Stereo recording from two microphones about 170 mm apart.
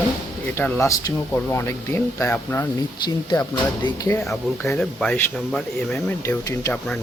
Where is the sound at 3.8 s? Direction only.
20° left (ahead or behind).